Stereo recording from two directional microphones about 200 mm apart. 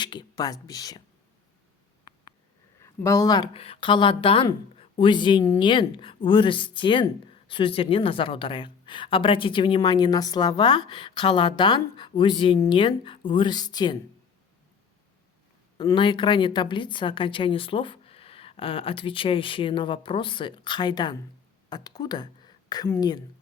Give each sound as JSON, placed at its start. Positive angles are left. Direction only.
{"t": 0.0, "sound": "speech", "side_deg": 20}
{"t": 2.8, "sound": "speech", "side_deg": 15}
{"t": 15.8, "sound": "speech", "side_deg": 25}